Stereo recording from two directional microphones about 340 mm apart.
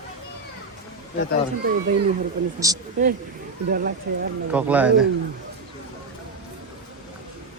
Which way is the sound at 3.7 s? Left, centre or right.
Right.